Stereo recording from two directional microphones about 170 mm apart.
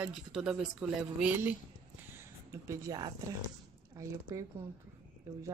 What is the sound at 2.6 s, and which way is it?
Speech, 20° right (ahead or behind).